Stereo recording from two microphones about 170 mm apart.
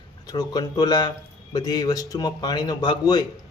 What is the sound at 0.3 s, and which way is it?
Speech, 25° left (ahead or behind).